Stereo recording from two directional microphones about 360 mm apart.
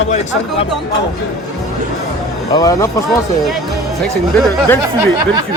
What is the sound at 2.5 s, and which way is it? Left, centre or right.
Speech, centre.